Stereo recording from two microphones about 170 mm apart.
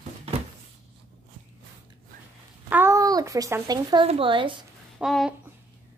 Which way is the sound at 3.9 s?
35° right (ahead or behind).